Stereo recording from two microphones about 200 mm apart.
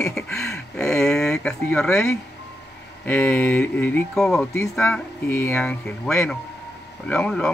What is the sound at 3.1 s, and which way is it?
A man's voice, 10° left (ahead or behind).